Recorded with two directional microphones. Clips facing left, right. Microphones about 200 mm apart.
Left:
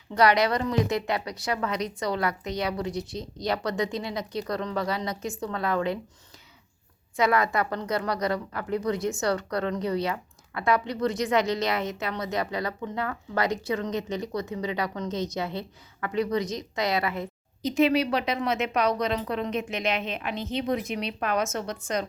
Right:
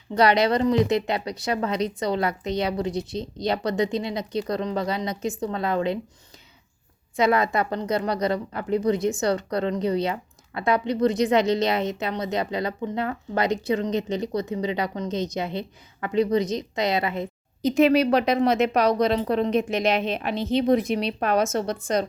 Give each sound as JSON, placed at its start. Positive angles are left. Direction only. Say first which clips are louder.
{"t": 0.1, "sound": "a woman's voice", "louder": "right 2 dB", "side_deg": -25}
{"t": 7.2, "sound": "a woman's voice", "louder": "right 3 dB", "side_deg": -25}
{"t": 17.6, "sound": "a woman's voice", "louder": "right 4 dB", "side_deg": -50}